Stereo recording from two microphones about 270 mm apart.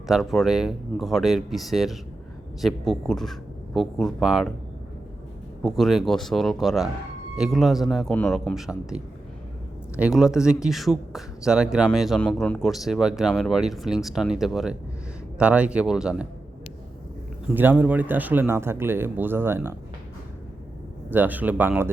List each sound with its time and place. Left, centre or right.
0.1 s speech: centre
5.6 s speech: centre
17.5 s speech: centre
21.1 s speech: centre